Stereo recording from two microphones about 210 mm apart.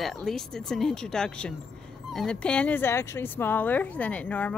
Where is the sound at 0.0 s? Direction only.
Centre (ahead or behind).